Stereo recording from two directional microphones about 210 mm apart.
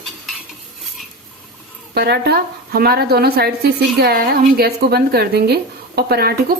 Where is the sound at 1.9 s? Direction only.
50° right (ahead or behind).